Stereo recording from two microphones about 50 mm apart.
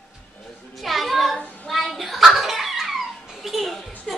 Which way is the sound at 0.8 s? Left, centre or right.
Centre.